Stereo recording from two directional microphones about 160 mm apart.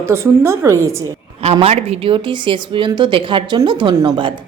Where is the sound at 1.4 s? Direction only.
40° right (ahead or behind).